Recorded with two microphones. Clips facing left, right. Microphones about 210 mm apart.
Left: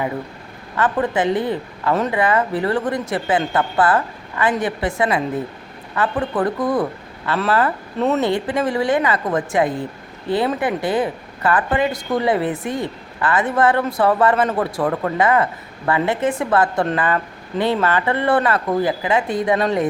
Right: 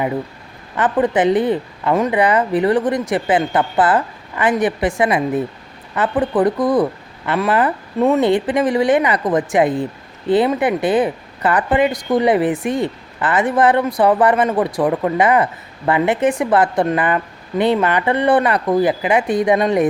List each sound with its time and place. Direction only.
0.8 s a woman's voice: 20° right (ahead or behind)